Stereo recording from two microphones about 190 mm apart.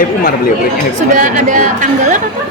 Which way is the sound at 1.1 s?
40° right (ahead or behind).